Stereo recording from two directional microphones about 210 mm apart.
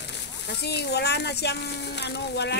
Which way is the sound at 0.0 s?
50° left (ahead or behind).